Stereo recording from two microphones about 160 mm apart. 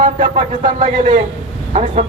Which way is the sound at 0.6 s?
45° right (ahead or behind).